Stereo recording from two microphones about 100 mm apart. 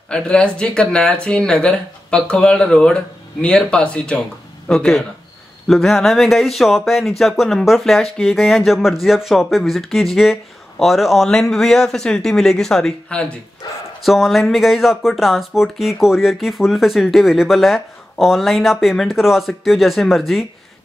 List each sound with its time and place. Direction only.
0.1 s speech: 10° left (ahead or behind)
13.6 s speech: 45° left (ahead or behind)
14.0 s speech: centre (ahead or behind)